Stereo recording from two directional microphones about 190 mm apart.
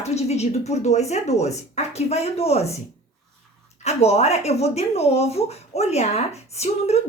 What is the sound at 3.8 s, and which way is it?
Speech, 35° left (ahead or behind).